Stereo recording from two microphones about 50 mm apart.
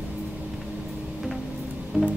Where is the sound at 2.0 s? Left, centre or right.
Right.